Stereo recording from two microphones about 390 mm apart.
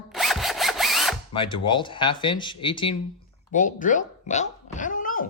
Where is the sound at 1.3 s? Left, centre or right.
Centre.